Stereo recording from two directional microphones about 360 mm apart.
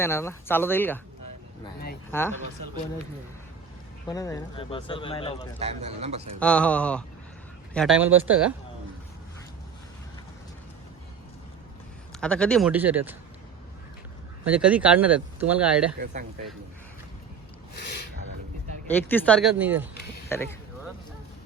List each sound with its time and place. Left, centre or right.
0.0 s speech: centre
2.0 s speech: centre
4.1 s speech: centre
5.5 s a man's voice: centre
6.4 s speech: centre
12.2 s speech: centre
14.5 s speech: centre
17.7 s a sound: left
18.9 s speech: centre
20.3 s speech: centre